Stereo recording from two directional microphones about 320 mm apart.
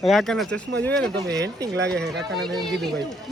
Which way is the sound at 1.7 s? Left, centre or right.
Right.